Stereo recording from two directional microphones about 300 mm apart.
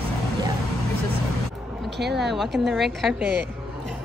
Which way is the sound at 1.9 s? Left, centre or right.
Right.